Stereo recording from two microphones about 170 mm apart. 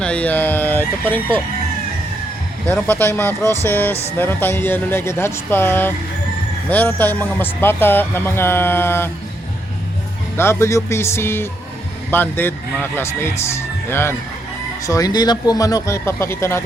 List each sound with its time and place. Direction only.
0.0 s speech: 5° left (ahead or behind)
2.6 s speech: 10° left (ahead or behind)
10.3 s speech: 15° left (ahead or behind)